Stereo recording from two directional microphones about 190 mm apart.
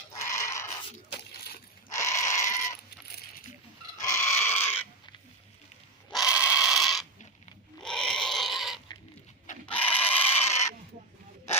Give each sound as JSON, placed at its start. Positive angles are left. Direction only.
{"t": 0.3, "sound": "goat", "side_deg": 15}
{"t": 1.9, "sound": "goat", "side_deg": 15}
{"t": 4.0, "sound": "goat", "side_deg": 15}
{"t": 6.1, "sound": "pig", "side_deg": -5}
{"t": 7.8, "sound": "livestock", "side_deg": 5}
{"t": 9.6, "sound": "a sound", "side_deg": 10}